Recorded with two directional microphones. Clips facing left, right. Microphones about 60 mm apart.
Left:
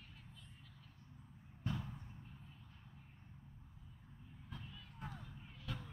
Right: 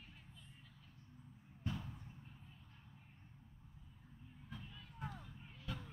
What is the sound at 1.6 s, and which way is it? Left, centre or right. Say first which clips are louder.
Basketball bounce: left 2 dB; centre.